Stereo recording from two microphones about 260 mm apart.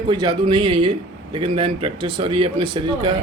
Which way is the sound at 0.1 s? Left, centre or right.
Centre.